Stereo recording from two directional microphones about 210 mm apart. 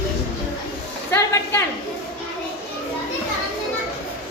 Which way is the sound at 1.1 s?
15° left (ahead or behind).